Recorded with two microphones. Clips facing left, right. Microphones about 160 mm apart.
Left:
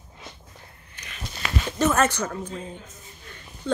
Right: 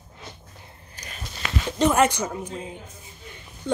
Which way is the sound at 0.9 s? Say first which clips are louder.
Right 3 dB; 35° right (ahead or behind).